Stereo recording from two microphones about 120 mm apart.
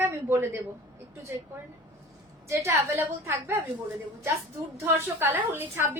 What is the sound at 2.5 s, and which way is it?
A woman's voice, 25° right (ahead or behind).